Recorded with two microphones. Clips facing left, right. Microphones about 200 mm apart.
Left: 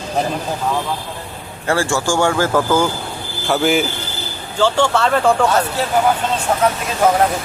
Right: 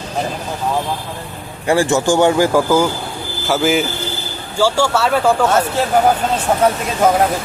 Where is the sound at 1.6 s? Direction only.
15° right (ahead or behind).